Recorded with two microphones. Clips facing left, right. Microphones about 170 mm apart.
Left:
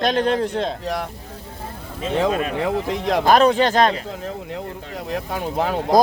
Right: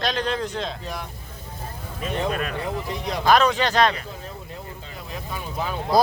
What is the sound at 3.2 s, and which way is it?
Speech, 45° left (ahead or behind).